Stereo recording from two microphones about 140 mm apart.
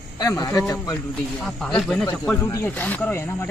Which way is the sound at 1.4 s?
5° left (ahead or behind).